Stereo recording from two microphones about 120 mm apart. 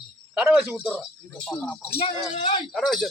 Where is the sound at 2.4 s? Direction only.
40° left (ahead or behind).